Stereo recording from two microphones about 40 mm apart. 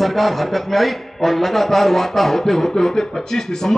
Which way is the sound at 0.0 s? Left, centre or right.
Centre.